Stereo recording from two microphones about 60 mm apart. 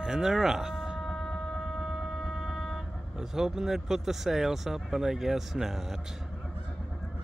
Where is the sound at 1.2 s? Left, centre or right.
Centre.